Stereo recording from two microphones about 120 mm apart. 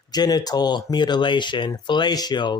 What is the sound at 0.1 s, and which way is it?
Speech, 35° left (ahead or behind).